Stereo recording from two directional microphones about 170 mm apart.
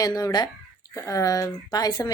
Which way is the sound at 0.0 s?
25° left (ahead or behind).